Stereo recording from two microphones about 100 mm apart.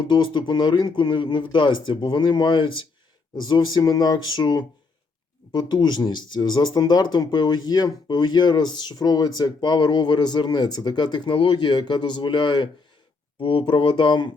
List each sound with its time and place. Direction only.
0.0 s speech: 50° left (ahead or behind)
13.4 s speech: 60° left (ahead or behind)